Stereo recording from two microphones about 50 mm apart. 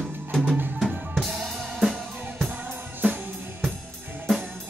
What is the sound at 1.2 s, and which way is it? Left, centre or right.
Drum kit, centre.